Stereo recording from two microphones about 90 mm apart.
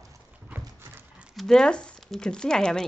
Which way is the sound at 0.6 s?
35° right (ahead or behind).